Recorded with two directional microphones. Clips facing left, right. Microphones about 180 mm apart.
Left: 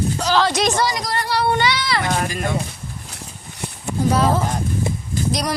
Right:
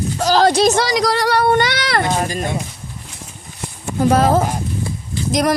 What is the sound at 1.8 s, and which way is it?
Speech, 60° right (ahead or behind).